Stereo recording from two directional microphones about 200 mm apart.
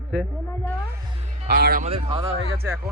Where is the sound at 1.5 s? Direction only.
50° right (ahead or behind).